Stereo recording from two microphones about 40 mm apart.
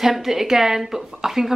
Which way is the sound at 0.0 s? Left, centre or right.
Centre.